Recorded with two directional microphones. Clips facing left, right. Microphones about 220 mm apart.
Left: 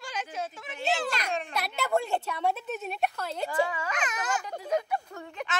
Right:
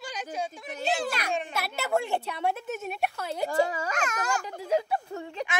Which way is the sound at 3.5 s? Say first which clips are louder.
Right 3 dB; 40° right (ahead or behind).